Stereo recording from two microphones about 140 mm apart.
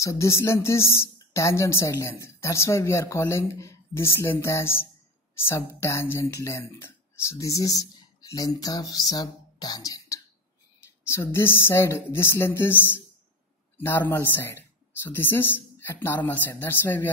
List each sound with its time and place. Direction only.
0.0 s speech: 20° left (ahead or behind)